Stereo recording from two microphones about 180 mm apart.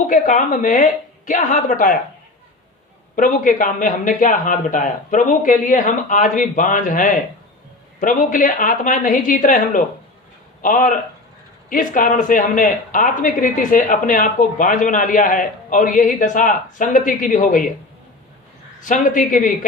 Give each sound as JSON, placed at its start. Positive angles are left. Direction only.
{"t": 0.1, "sound": "speech", "side_deg": 45}
{"t": 3.2, "sound": "speech", "side_deg": 45}
{"t": 18.9, "sound": "speech", "side_deg": 45}